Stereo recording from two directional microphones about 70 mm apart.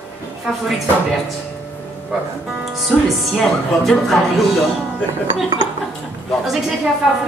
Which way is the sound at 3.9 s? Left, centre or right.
Centre.